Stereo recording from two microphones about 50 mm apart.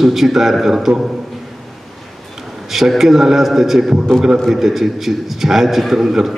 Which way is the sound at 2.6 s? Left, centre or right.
Centre.